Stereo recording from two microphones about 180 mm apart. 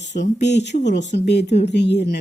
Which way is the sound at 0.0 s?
75° left (ahead or behind).